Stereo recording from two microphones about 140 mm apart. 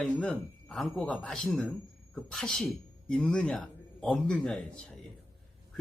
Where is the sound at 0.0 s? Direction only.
5° left (ahead or behind).